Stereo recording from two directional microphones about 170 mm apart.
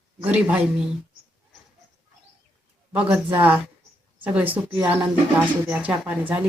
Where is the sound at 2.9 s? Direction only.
10° right (ahead or behind).